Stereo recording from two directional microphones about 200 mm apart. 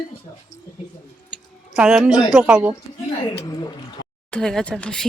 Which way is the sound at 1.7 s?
5° right (ahead or behind).